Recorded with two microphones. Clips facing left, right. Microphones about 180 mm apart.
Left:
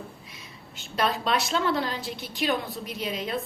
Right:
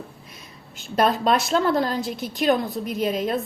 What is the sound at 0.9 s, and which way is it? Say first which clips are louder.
A woman's voice: right 6 dB; 45° right (ahead or behind).